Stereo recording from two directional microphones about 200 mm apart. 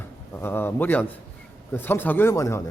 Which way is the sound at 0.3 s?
10° left (ahead or behind).